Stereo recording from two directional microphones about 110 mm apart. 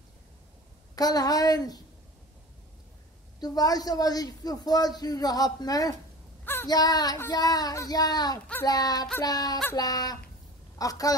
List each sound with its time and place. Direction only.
0.9 s a man's voice: 35° left (ahead or behind)
3.3 s a man's voice: 35° left (ahead or behind)
6.4 s a sound: 20° left (ahead or behind)
6.7 s a man's voice: 35° left (ahead or behind)